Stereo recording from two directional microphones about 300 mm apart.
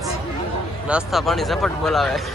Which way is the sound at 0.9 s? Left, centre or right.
Centre.